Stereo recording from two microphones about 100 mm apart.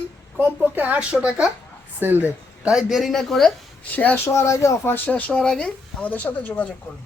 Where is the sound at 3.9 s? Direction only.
15° left (ahead or behind).